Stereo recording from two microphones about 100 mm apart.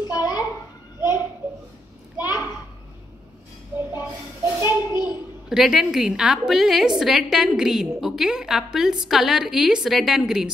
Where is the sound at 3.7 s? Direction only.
20° right (ahead or behind).